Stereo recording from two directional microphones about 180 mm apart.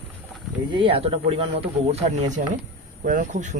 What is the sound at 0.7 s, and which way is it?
Speech, 30° right (ahead or behind).